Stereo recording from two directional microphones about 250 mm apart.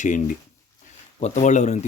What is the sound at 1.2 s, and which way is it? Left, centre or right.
Speech, left.